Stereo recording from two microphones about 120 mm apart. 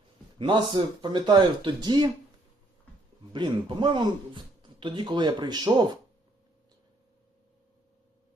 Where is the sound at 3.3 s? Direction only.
40° right (ahead or behind).